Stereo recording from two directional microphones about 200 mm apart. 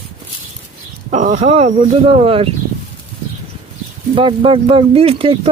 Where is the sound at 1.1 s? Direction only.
35° right (ahead or behind).